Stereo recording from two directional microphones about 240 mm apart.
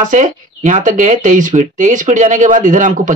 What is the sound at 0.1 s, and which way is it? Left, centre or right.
Speech, right.